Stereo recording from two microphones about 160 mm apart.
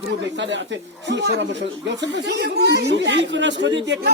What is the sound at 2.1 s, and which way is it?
Speech, 90° right.